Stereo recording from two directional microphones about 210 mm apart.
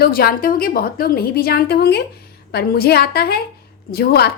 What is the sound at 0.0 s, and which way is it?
A woman's voice, 45° left (ahead or behind).